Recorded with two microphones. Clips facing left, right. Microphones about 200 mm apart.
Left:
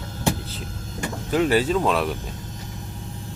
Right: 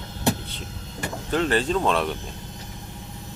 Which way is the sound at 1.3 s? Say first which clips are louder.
Left 3 dB; 10° left (ahead or behind).